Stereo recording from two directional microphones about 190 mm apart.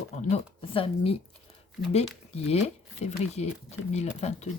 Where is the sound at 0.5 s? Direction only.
30° left (ahead or behind).